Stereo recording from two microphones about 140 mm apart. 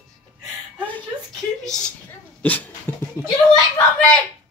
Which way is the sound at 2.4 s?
10° left (ahead or behind).